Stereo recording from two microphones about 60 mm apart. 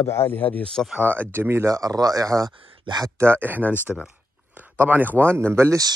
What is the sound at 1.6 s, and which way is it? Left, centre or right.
Speech, right.